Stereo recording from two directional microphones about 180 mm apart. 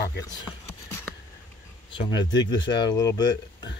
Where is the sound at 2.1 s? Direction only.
25° left (ahead or behind).